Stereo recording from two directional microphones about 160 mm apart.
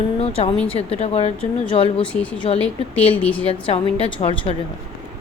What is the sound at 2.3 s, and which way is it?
Speech, 30° left (ahead or behind).